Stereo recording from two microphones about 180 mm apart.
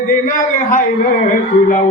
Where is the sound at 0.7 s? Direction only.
55° left (ahead or behind).